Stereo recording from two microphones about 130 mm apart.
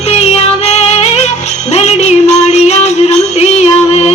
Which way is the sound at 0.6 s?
55° left (ahead or behind).